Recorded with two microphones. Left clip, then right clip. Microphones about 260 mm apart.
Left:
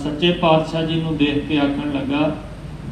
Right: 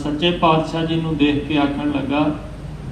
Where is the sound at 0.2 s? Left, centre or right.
Right.